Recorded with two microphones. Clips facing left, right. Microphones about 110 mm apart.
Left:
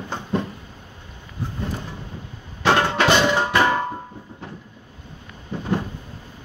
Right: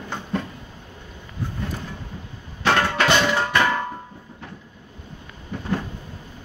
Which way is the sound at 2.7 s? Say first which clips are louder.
Left 2 dB; 20° left (ahead or behind).